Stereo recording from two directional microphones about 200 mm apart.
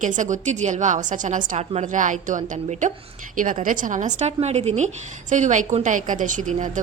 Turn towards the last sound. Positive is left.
turn(degrees=-40)  # may be behind; listen again after turning